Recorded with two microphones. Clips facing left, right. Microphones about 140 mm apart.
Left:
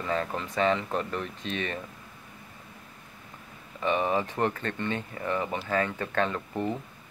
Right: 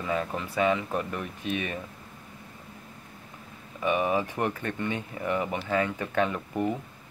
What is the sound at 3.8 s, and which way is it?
Speech, 10° right (ahead or behind).